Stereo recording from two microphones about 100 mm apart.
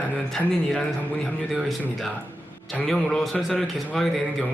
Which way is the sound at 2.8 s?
5° left (ahead or behind).